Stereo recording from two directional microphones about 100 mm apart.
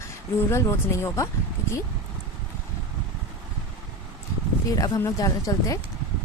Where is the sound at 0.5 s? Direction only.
25° left (ahead or behind).